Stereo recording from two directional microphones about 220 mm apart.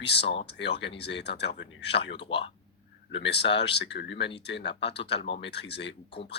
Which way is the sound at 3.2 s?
50° left (ahead or behind).